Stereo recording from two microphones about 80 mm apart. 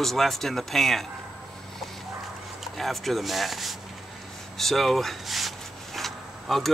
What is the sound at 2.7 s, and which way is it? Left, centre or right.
Speech, centre.